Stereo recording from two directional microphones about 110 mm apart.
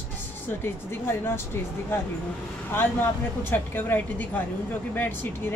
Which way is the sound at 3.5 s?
20° left (ahead or behind).